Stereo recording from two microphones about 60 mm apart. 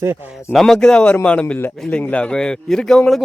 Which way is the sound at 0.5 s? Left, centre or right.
Centre.